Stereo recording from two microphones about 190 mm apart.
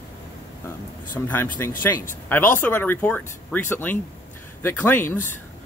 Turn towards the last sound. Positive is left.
turn(degrees=10)  # may be behind; listen again after turning